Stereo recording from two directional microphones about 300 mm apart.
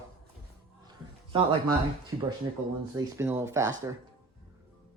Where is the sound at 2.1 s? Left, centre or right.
Centre.